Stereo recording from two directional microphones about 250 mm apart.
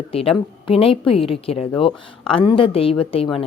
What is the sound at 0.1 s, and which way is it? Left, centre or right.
A woman's voice, left.